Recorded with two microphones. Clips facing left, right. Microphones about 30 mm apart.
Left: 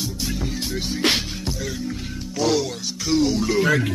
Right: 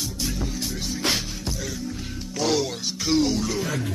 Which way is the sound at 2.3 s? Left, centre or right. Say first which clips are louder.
Left 2 dB; centre.